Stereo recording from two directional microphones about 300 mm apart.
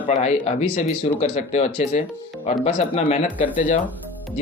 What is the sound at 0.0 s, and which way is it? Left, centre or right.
Speech, left.